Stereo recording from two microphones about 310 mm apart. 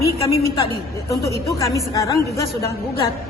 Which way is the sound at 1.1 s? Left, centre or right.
Centre.